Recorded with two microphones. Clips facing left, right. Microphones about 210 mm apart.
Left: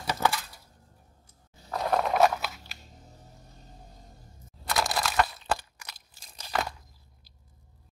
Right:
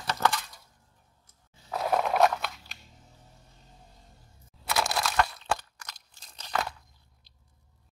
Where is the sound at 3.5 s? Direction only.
40° left (ahead or behind).